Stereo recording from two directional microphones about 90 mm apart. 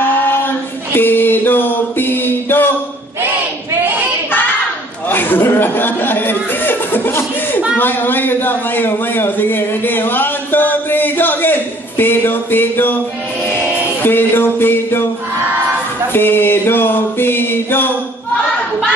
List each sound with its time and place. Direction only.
0.0 s a sound: 25° left (ahead or behind)
0.9 s mantra: 20° left (ahead or behind)
5.1 s a sound: 20° left (ahead or behind)
7.7 s a man's voice: 20° left (ahead or behind)
12.0 s mantra: 25° left (ahead or behind)
14.0 s mantra: 25° left (ahead or behind)
16.1 s mantra: 25° left (ahead or behind)